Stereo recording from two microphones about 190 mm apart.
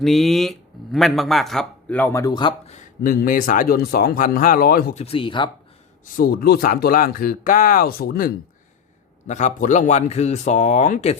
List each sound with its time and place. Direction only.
0.0 s a man's voice: centre (ahead or behind); by 2.7 s 25° left (ahead or behind)
3.0 s speech: 50° left (ahead or behind)
5.0 s speech: 25° left (ahead or behind)
6.1 s speech: 50° left (ahead or behind)
9.2 s speech: 40° left (ahead or behind)